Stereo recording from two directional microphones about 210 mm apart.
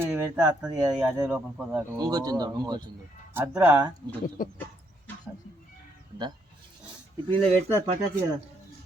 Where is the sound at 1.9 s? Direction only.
15° right (ahead or behind).